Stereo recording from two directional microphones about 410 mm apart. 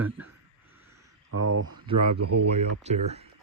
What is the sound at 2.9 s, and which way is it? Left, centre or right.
Speech, centre.